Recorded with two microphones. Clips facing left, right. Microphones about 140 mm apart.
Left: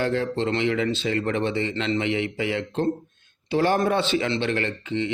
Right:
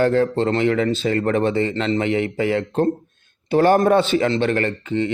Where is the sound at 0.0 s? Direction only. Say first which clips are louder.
Right 7 dB; 45° right (ahead or behind).